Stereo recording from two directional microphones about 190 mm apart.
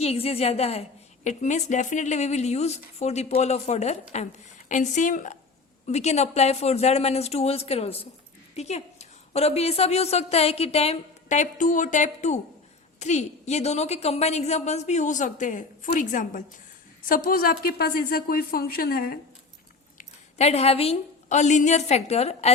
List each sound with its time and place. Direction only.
0.0 s a woman's voice: 30° left (ahead or behind); by 19.2 s 50° left (ahead or behind)
20.0 s a woman's voice: 35° left (ahead or behind)